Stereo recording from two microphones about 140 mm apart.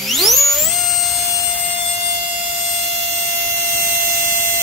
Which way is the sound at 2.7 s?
50° right (ahead or behind).